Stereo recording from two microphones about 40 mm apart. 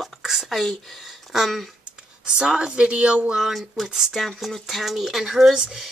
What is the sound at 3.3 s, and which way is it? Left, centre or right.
Speech, centre.